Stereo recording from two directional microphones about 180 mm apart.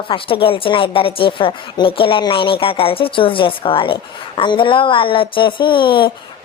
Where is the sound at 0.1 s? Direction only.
30° left (ahead or behind).